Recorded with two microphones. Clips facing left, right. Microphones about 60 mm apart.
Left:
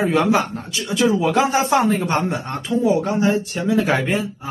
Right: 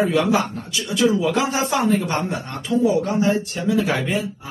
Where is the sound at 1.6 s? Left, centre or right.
Left.